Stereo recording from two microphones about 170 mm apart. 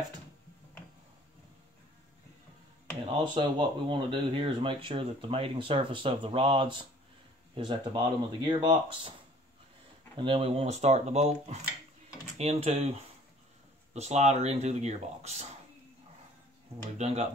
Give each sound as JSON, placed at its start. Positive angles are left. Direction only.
{"t": 3.1, "sound": "speech", "side_deg": -30}
{"t": 10.1, "sound": "speech", "side_deg": -30}
{"t": 17.0, "sound": "speech", "side_deg": -40}